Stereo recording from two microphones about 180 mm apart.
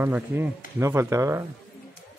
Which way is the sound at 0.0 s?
10° right (ahead or behind).